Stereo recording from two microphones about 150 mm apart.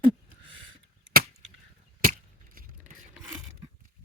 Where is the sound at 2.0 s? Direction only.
65° right (ahead or behind).